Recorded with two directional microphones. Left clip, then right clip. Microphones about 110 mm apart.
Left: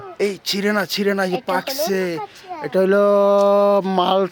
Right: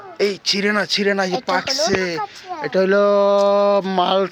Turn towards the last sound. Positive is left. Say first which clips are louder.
# even
turn(degrees=45)  # may be behind; listen again after turning